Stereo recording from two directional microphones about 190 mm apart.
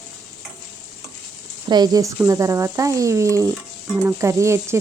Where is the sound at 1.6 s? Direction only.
20° right (ahead or behind).